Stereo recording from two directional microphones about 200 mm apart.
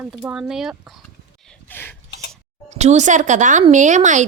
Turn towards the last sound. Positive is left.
turn(degrees=-40)  # may be behind; listen again after turning